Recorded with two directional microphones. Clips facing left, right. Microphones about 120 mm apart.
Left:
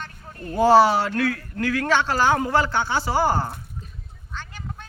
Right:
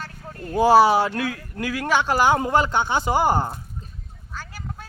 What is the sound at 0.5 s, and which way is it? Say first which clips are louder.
Speech: even; 15° right (ahead or behind).